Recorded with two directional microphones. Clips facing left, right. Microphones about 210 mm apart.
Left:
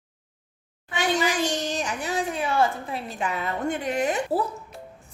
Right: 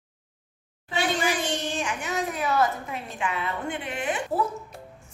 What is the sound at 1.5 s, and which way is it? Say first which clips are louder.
A woman's voice: left 1 dB; 40° left (ahead or behind).